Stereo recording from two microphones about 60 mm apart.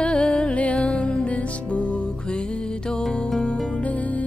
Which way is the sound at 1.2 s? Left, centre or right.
Left.